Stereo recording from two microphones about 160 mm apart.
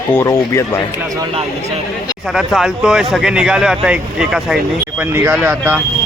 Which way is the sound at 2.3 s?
Centre (ahead or behind).